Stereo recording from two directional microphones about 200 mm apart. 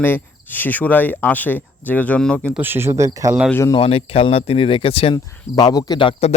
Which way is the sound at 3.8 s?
30° left (ahead or behind).